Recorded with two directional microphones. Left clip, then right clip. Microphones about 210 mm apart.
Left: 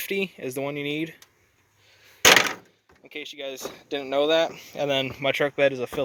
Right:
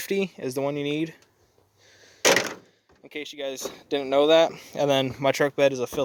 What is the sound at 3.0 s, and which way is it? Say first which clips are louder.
Speech: right 2 dB; 35° right (ahead or behind).